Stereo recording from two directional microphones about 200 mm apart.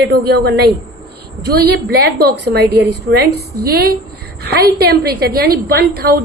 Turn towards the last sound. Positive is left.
turn(degrees=-50)  # may be behind; listen again after turning